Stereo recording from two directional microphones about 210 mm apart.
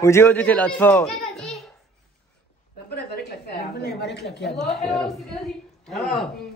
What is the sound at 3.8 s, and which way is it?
Speech, 50° left (ahead or behind).